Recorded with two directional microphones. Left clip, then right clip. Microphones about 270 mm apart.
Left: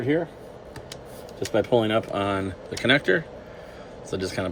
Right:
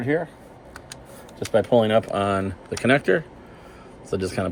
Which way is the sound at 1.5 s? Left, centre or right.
Right.